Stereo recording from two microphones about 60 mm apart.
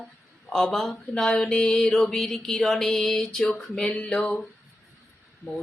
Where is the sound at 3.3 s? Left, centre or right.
Centre.